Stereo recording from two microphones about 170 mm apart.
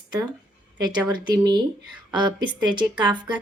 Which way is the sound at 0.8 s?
25° right (ahead or behind).